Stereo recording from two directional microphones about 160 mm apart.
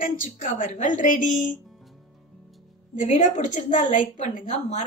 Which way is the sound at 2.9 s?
50° left (ahead or behind).